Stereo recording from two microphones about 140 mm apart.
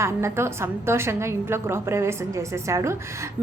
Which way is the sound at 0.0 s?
20° right (ahead or behind).